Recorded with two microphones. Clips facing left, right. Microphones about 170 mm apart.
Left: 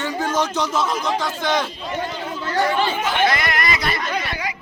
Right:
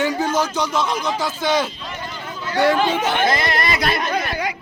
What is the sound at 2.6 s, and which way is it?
Speech, 80° right.